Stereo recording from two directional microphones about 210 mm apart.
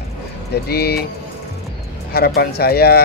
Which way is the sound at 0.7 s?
50° left (ahead or behind).